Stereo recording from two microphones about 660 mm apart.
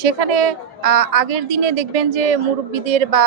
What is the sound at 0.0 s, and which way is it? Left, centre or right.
A woman's voice, right.